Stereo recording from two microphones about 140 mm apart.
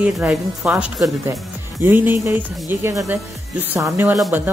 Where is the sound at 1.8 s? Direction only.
15° right (ahead or behind).